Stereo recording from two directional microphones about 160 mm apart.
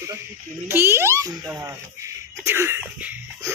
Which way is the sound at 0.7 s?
15° right (ahead or behind).